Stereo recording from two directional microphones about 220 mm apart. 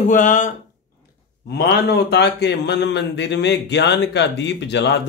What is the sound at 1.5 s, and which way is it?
Speech, 50° left (ahead or behind).